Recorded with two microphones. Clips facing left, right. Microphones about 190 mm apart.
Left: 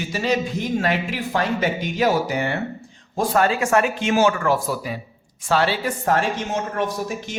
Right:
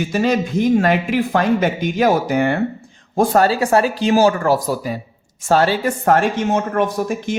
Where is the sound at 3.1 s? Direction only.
40° right (ahead or behind).